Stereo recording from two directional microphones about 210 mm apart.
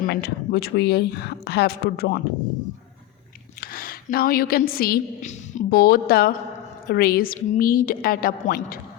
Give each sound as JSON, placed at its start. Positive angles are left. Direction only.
{"t": 0.0, "sound": "a woman's voice", "side_deg": 50}
{"t": 3.6, "sound": "a woman's voice", "side_deg": 45}